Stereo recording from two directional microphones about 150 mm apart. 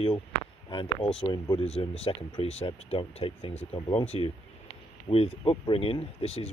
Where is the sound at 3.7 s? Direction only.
30° left (ahead or behind).